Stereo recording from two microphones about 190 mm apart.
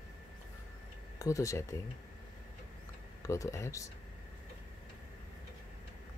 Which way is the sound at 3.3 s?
15° left (ahead or behind).